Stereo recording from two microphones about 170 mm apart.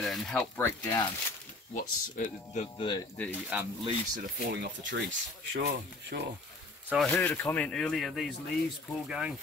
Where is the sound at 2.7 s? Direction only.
25° left (ahead or behind).